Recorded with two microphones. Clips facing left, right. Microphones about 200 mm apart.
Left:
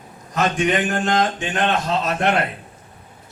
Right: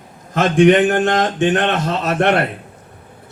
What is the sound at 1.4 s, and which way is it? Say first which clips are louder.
A man's voice: right 6 dB; 65° right (ahead or behind).